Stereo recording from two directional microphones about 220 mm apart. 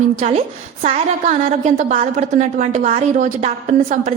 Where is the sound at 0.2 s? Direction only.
30° right (ahead or behind).